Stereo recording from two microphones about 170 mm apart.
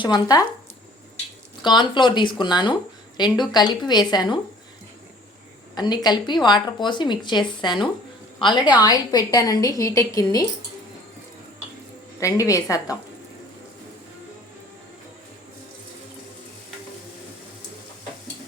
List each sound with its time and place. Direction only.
0.0 s a woman's voice: 25° left (ahead or behind)
1.6 s a woman's voice: 25° left (ahead or behind)
5.7 s a woman's voice: 25° left (ahead or behind)
12.2 s a woman's voice: 20° left (ahead or behind)